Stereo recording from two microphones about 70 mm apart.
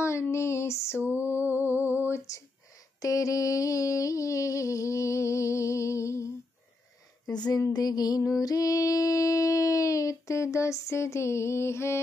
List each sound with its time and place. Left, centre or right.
0.0 s female singing: left
1.6 s lullaby: left
3.0 s a sound: left
7.2 s a sound: centre
7.7 s music: left
8.4 s mantra: left